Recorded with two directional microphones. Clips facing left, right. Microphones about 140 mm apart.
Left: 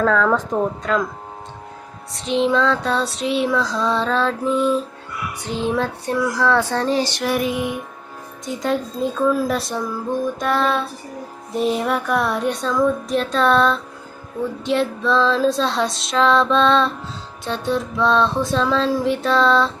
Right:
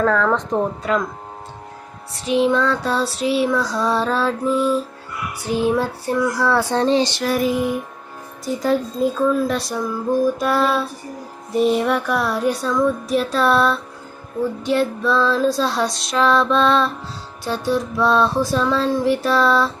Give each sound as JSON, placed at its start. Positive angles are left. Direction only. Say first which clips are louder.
{"t": 0.0, "sound": "female singing", "louder": "even", "side_deg": 0}
{"t": 0.8, "sound": "child singing", "louder": "even", "side_deg": -5}
{"t": 2.1, "sound": "female singing", "louder": "right 1 dB", "side_deg": -5}
{"t": 5.4, "sound": "child singing", "louder": "right 3 dB", "side_deg": -10}
{"t": 6.8, "sound": "a sound", "louder": "right 3 dB", "side_deg": -25}
{"t": 7.2, "sound": "female singing", "louder": "right 2 dB", "side_deg": 0}
{"t": 10.4, "sound": "child singing", "louder": "right 1 dB", "side_deg": -5}
{"t": 11.5, "sound": "female singing", "louder": "right 3 dB", "side_deg": 0}